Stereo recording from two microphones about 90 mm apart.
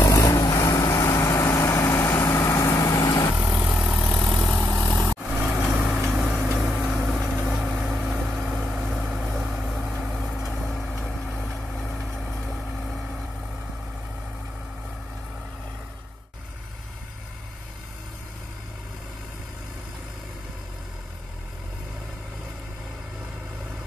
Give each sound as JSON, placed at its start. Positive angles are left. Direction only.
{"t": 0.0, "sound": "vehicle", "side_deg": 40}
{"t": 3.5, "sound": "vehicle", "side_deg": -10}
{"t": 4.5, "sound": "vehicle", "side_deg": 15}
{"t": 5.4, "sound": "vehicle", "side_deg": -10}
{"t": 7.1, "sound": "vehicle", "side_deg": 5}